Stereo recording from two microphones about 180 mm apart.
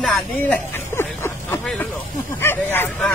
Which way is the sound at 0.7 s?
15° left (ahead or behind).